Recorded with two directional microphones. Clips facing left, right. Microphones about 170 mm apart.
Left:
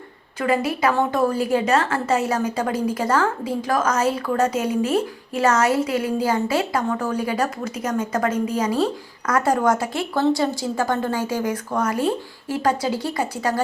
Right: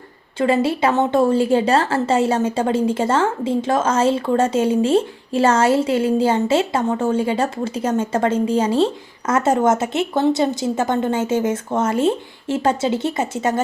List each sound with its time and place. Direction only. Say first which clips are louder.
0.3 s a woman's voice: right 4 dB; 30° right (ahead or behind)